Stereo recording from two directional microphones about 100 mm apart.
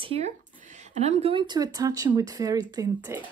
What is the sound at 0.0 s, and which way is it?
Speech, 70° right (ahead or behind).